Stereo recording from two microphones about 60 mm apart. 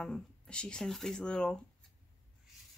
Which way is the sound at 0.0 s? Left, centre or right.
Centre.